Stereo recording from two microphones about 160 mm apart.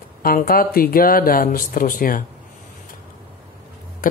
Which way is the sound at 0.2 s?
65° left (ahead or behind).